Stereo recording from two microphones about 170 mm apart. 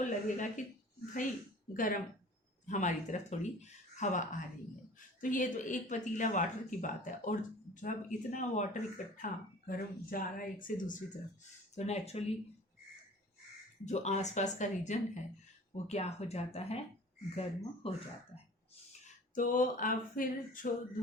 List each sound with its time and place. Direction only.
0.0 s speech: 50° left (ahead or behind)
1.7 s speech: 50° left (ahead or behind)
11.7 s speech: 40° left (ahead or behind)
13.8 s speech: 40° left (ahead or behind)
19.0 s a sound: 50° left (ahead or behind)